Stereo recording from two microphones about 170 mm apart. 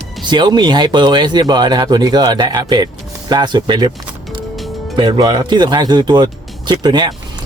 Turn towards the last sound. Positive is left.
turn(degrees=-25)  # may be behind; listen again after turning